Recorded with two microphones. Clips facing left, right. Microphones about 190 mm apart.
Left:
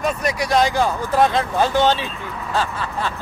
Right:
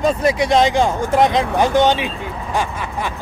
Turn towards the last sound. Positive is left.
turn(degrees=-15)  # may be behind; listen again after turning